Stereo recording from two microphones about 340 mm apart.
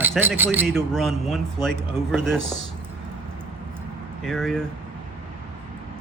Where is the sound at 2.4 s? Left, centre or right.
Right.